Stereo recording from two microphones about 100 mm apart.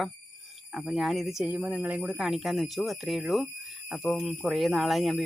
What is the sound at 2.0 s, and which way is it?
Speech, 5° right (ahead or behind).